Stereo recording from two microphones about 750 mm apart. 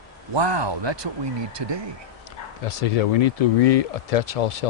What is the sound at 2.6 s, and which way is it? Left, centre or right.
Speech, left.